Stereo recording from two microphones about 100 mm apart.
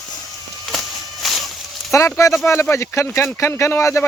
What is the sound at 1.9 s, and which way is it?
Speech, 30° left (ahead or behind).